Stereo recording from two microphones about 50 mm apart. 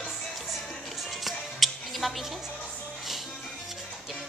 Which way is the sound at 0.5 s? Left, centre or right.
Centre.